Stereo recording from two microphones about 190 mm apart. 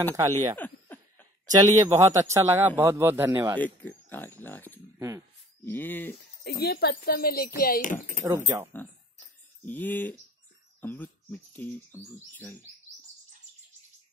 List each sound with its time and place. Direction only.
0.1 s speech: 15° right (ahead or behind)
3.5 s speech: 10° left (ahead or behind)
4.9 s a sound: 15° right (ahead or behind)
5.7 s speech: 10° left (ahead or behind)
6.4 s speech: 60° left (ahead or behind)
8.8 s a sound: 10° left (ahead or behind)
9.7 s speech: 10° left (ahead or behind)